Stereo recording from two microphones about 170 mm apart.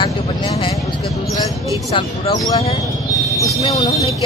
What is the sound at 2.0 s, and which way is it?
Speech, 30° left (ahead or behind).